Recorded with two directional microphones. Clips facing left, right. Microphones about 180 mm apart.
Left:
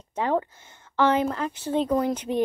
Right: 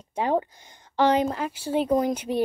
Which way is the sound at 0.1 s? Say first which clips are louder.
Right 1 dB; 15° right (ahead or behind).